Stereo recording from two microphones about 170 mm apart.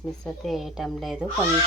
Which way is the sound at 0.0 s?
Centre (ahead or behind).